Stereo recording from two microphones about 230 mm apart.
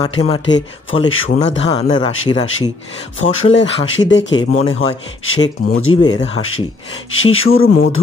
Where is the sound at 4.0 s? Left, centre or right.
Left.